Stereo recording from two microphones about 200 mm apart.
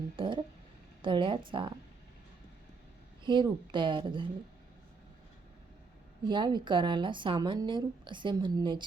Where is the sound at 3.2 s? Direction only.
25° right (ahead or behind).